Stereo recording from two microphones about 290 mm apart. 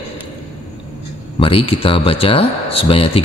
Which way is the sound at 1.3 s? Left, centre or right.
Centre.